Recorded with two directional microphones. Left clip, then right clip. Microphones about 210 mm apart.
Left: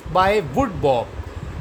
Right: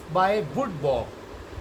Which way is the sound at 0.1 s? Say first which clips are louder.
Left 5 dB; 55° left (ahead or behind).